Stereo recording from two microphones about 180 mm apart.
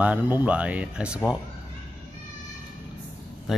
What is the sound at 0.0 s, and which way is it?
Speech, 10° right (ahead or behind).